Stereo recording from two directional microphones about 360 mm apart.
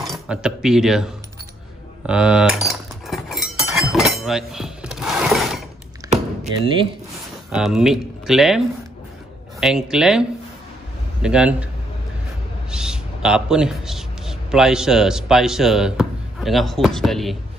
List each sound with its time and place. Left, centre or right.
0.0 s speech: centre
2.0 s cutlery: centre
6.0 s a sound: centre
7.5 s speech: centre
11.2 s speech: centre
12.7 s a man's voice: centre